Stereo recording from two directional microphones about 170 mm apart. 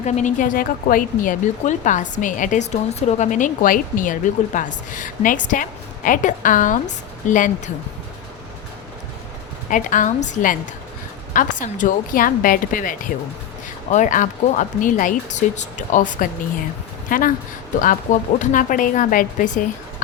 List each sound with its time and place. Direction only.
0.0 s speech: 45° left (ahead or behind)
9.6 s speech: 50° left (ahead or behind)